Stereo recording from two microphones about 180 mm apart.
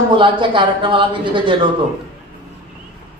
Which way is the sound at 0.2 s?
25° right (ahead or behind).